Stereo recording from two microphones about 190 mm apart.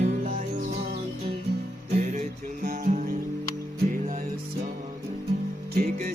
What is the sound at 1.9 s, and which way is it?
Music, 40° right (ahead or behind).